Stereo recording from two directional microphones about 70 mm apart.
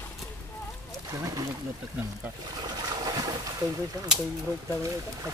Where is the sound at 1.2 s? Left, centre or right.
Right.